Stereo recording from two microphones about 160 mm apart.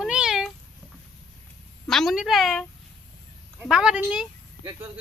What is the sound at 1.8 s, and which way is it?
Speech, centre (ahead or behind).